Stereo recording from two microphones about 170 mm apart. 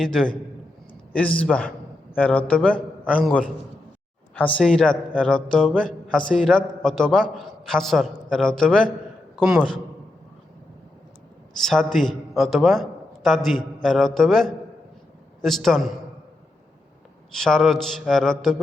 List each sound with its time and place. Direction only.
0.0 s a man's voice: 5° left (ahead or behind)
11.6 s a man's voice: centre (ahead or behind)
17.4 s a man's voice: centre (ahead or behind)